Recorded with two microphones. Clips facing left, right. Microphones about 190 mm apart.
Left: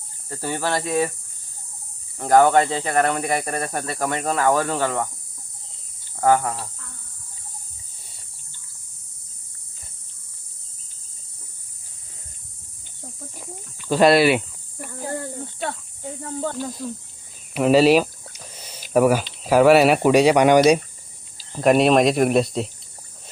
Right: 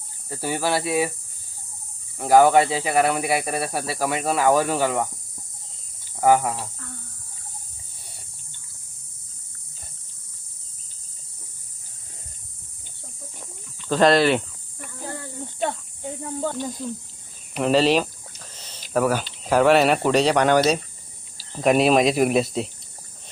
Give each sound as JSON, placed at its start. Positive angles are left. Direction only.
{"t": 0.3, "sound": "speech", "side_deg": -10}
{"t": 2.1, "sound": "speech", "side_deg": -5}
{"t": 6.1, "sound": "speech", "side_deg": -10}
{"t": 13.4, "sound": "cricket", "side_deg": 10}
{"t": 14.8, "sound": "snake", "side_deg": 45}
{"t": 16.2, "sound": "speech", "side_deg": -5}
{"t": 21.5, "sound": "speech", "side_deg": 0}